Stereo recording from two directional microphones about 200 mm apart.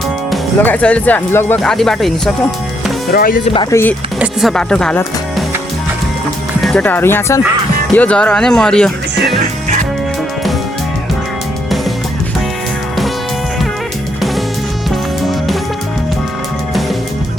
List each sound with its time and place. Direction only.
0.3 s speech: 5° left (ahead or behind)
3.1 s speech: 45° left (ahead or behind)
3.5 s speech: 20° left (ahead or behind)
4.2 s speech: centre (ahead or behind)
6.6 s speech: 5° left (ahead or behind)
14.8 s music: centre (ahead or behind)